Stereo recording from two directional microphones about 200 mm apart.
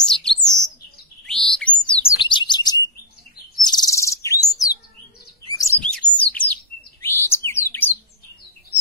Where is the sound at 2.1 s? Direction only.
25° left (ahead or behind).